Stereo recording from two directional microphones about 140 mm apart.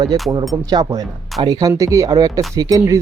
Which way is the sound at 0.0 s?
30° right (ahead or behind).